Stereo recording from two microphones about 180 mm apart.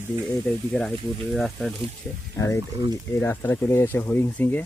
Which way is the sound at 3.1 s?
10° left (ahead or behind).